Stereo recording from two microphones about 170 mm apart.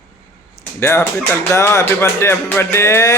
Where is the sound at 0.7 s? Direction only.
15° left (ahead or behind).